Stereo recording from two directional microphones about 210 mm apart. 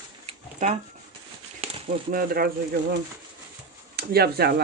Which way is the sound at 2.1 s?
45° right (ahead or behind).